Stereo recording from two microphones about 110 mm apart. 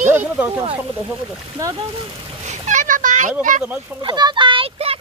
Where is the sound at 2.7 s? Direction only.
90° right.